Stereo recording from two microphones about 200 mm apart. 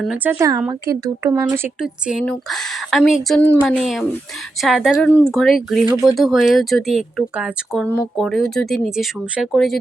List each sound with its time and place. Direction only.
0.0 s speech: 5° right (ahead or behind)
0.3 s speech: 15° right (ahead or behind); by 9.7 s centre (ahead or behind)